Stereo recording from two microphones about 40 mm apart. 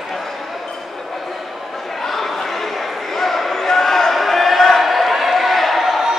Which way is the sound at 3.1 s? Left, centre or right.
Centre.